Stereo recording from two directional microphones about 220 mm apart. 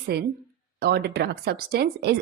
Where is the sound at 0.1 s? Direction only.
50° right (ahead or behind).